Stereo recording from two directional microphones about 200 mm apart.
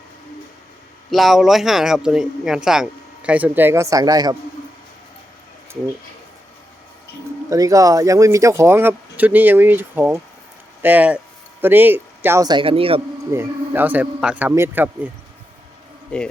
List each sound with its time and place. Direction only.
1.1 s a man's voice: centre (ahead or behind); by 4.4 s 20° right (ahead or behind)
7.5 s speech: 15° right (ahead or behind)
13.3 s speech: 10° right (ahead or behind)
16.1 s a man's voice: 5° left (ahead or behind)